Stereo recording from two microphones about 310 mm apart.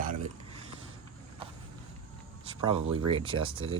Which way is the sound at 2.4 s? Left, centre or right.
Centre.